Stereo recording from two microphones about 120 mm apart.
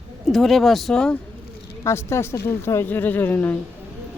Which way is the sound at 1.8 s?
20° left (ahead or behind).